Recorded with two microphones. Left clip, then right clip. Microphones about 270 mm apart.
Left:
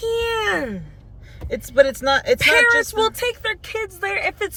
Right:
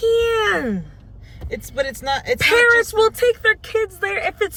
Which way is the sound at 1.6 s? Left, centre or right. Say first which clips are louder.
Left 9 dB; centre.